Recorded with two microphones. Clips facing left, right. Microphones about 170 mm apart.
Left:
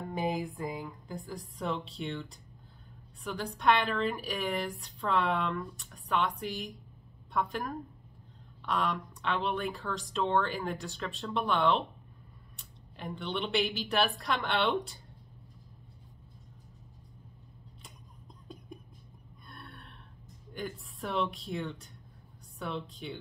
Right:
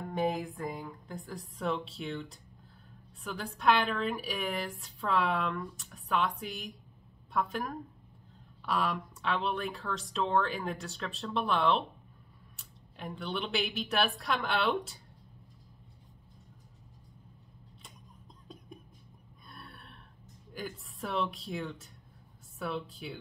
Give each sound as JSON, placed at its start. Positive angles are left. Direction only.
{"t": 0.1, "sound": "a woman's voice", "side_deg": 0}
{"t": 18.5, "sound": "whispering", "side_deg": 0}
{"t": 19.4, "sound": "gasp", "side_deg": 0}
{"t": 20.5, "sound": "a woman's voice", "side_deg": 0}